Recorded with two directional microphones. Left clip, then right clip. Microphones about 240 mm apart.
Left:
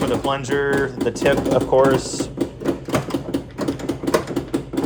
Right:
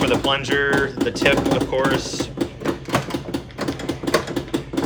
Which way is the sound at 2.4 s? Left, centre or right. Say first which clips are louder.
Left 2 dB; centre.